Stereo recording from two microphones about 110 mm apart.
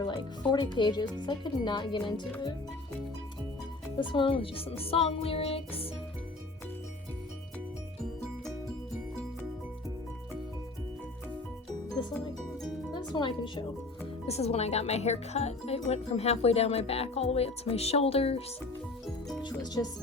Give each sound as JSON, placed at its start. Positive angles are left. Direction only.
{"t": 0.5, "sound": "speech", "side_deg": 40}
{"t": 3.9, "sound": "speech", "side_deg": 45}
{"t": 12.9, "sound": "speech", "side_deg": 45}
{"t": 14.3, "sound": "speech", "side_deg": 70}
{"t": 19.4, "sound": "music", "side_deg": 40}